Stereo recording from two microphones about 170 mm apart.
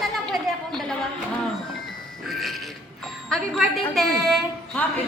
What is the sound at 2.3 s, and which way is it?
Music, centre (ahead or behind).